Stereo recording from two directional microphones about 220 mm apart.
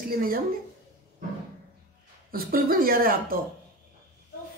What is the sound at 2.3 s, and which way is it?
Speech, 40° right (ahead or behind).